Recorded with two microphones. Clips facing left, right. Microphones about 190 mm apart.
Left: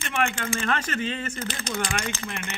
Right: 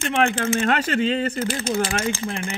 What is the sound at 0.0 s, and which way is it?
Speech, 35° right (ahead or behind).